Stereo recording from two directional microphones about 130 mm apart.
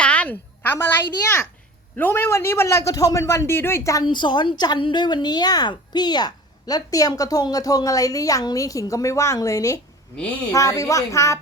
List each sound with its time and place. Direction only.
0.0 s a woman's voice: 10° left (ahead or behind)
4.0 s a woman's voice: 35° left (ahead or behind)